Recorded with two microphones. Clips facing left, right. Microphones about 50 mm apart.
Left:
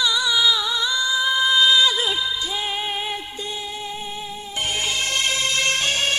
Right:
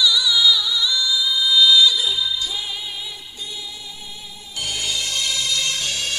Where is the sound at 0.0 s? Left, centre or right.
Left.